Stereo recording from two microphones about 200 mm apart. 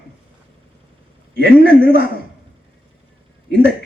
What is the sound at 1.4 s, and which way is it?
Speech, 50° right (ahead or behind).